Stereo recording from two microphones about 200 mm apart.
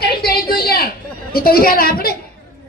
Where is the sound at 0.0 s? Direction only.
50° left (ahead or behind).